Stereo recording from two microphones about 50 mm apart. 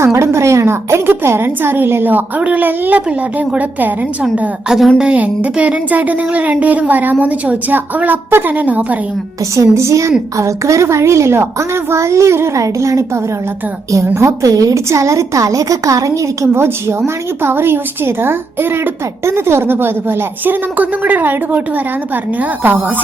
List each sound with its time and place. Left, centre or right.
0.0 s a woman's voice: right
2.4 s speech: right
4.7 s a woman's voice: centre
5.1 s speech: right
8.3 s a woman's voice: right
8.5 s speech: right
9.6 s a woman's voice: right
14.2 s a woman's voice: right
17.4 s a woman's voice: right